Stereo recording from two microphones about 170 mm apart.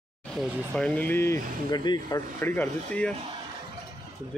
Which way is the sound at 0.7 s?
5° left (ahead or behind).